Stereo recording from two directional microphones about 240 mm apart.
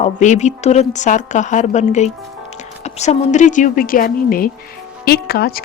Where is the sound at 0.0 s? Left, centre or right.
Left.